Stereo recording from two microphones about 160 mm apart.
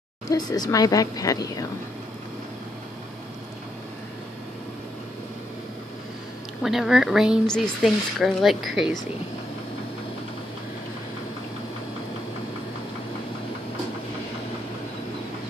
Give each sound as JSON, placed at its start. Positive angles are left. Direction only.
{"t": 0.3, "sound": "speech", "side_deg": 25}
{"t": 6.6, "sound": "speech", "side_deg": 0}